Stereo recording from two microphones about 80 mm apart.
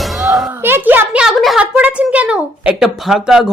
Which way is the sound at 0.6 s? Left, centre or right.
Right.